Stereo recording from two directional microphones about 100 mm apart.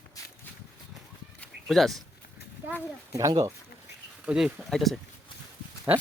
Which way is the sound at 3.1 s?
35° right (ahead or behind).